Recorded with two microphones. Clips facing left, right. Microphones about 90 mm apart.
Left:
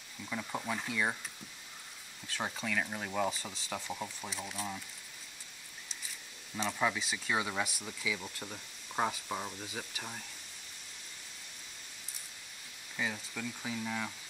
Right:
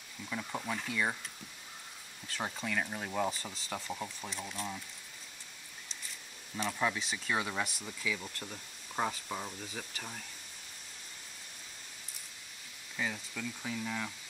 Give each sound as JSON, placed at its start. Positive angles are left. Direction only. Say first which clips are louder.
{"t": 0.2, "sound": "speech", "louder": "even", "side_deg": 0}
{"t": 2.3, "sound": "speech", "louder": "even", "side_deg": 0}
{"t": 6.7, "sound": "speech", "louder": "left 1 dB", "side_deg": 5}
{"t": 12.9, "sound": "speech", "louder": "even", "side_deg": 5}